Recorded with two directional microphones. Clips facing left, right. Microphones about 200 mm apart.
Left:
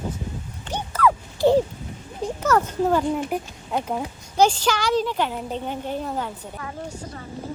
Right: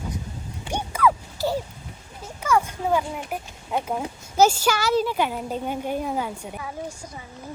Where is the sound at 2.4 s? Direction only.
10° right (ahead or behind).